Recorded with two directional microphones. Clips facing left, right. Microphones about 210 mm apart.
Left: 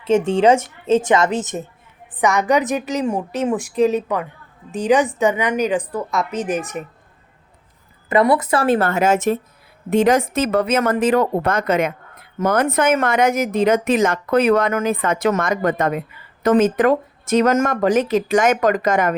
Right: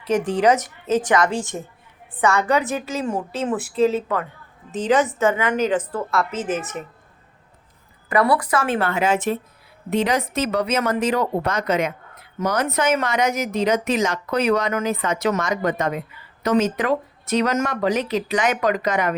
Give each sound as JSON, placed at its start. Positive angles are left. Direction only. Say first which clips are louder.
{"t": 0.0, "sound": "a woman's voice", "louder": "left 4 dB", "side_deg": 25}
{"t": 8.1, "sound": "speech", "louder": "left 3 dB", "side_deg": 20}